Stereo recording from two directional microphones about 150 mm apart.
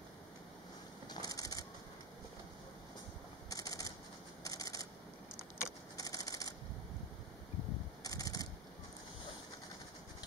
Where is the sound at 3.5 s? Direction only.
25° left (ahead or behind).